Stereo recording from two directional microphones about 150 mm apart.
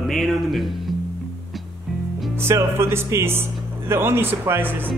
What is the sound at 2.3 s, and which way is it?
Speech, 15° right (ahead or behind).